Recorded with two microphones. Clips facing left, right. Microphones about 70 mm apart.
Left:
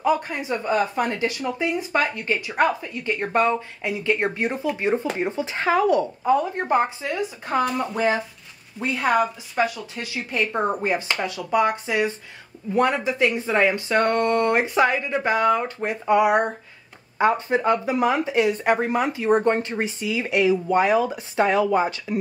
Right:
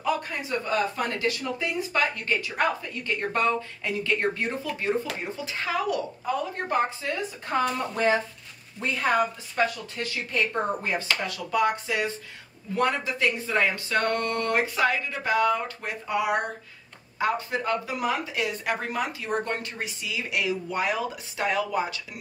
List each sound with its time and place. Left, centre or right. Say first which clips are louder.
0.0 s a woman's voice: left 6 dB; left